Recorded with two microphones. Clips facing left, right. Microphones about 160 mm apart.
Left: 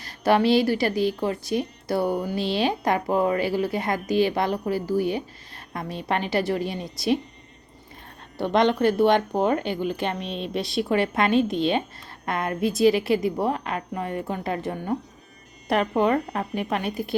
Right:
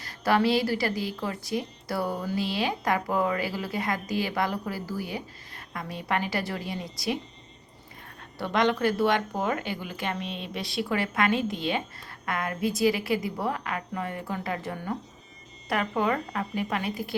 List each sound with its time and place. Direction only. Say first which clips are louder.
0.0 s speech: left 4 dB; 25° left (ahead or behind)
8.4 s speech: left 4 dB; 25° left (ahead or behind)
16.0 s speech: left 5 dB; 30° left (ahead or behind)